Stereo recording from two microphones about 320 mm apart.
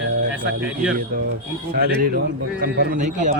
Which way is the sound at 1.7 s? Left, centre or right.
Right.